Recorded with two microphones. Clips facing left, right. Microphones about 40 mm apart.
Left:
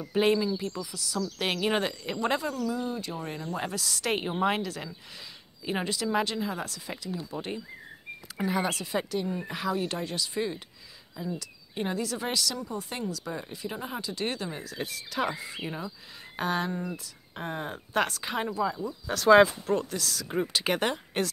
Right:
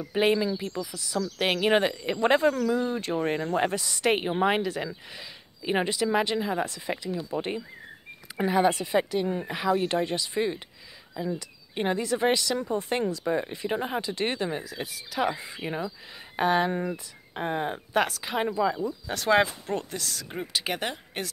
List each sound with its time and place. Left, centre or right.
0.1 s speech: centre
2.2 s speech: right
3.5 s speech: right
9.8 s speech: right
12.5 s speech: right
14.6 s speech: centre
15.3 s speech: right
17.7 s speech: centre
18.4 s speech: right
19.6 s speech: right
20.2 s speech: centre